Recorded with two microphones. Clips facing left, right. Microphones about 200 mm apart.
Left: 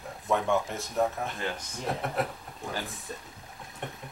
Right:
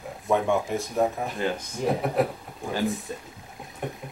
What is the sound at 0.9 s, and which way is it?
Speech, 15° right (ahead or behind).